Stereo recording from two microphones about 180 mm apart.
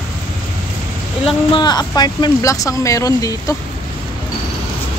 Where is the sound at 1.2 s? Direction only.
25° left (ahead or behind).